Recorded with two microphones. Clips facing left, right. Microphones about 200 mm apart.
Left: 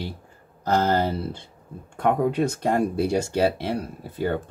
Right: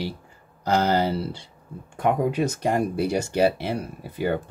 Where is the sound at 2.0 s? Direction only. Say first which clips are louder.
Left 1 dB; 5° right (ahead or behind).